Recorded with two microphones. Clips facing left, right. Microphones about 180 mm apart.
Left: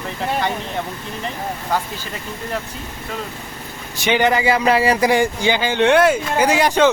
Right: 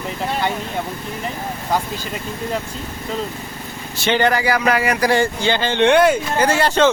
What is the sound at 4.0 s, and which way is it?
Speech, 15° left (ahead or behind).